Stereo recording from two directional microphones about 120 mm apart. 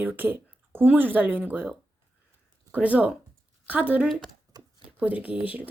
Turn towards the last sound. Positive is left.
turn(degrees=-15)  # may be behind; listen again after turning